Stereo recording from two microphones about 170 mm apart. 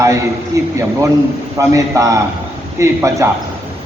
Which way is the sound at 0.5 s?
20° right (ahead or behind).